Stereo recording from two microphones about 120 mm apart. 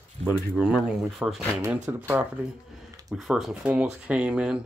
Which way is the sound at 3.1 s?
Centre (ahead or behind).